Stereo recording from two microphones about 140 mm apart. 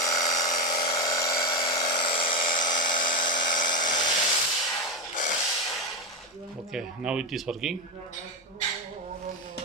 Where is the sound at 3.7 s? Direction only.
30° left (ahead or behind).